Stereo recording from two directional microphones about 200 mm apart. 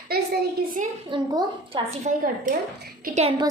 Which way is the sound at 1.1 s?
25° right (ahead or behind).